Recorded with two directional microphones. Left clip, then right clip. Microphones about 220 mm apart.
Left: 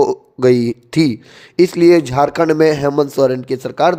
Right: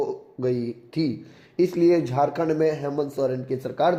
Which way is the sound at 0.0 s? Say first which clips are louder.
Left 13 dB; 40° left (ahead or behind).